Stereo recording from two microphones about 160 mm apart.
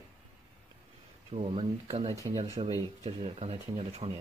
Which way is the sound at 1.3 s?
35° right (ahead or behind).